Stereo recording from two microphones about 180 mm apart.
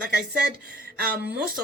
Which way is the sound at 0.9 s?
55° right (ahead or behind).